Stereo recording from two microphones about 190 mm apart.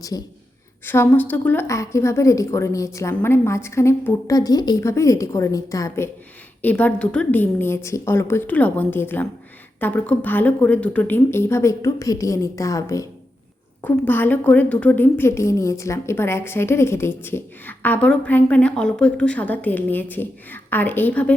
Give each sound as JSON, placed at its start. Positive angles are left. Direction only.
{"t": 0.9, "sound": "a woman's voice", "side_deg": 10}